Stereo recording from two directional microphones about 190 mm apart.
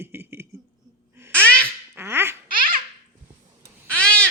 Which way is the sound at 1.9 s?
10° right (ahead or behind).